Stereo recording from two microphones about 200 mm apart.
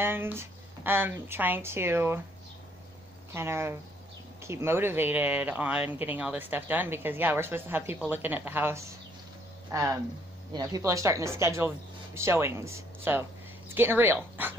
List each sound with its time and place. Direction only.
0.0 s speech: 10° right (ahead or behind)
3.3 s speech: 10° right (ahead or behind)